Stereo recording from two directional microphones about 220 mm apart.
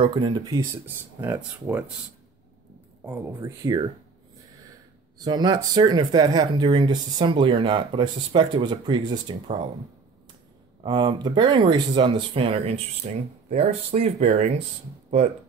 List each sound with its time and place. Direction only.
0.0 s speech: 20° right (ahead or behind)
3.1 s speech: 10° right (ahead or behind)
5.2 s speech: 20° right (ahead or behind)
10.8 s speech: 20° right (ahead or behind)